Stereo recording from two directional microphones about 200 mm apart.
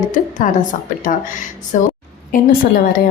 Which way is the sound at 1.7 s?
40° left (ahead or behind).